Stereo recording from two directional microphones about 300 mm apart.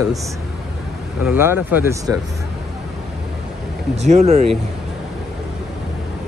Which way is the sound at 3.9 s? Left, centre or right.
Right.